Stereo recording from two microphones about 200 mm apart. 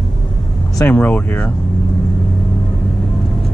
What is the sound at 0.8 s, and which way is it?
Speech, 10° left (ahead or behind).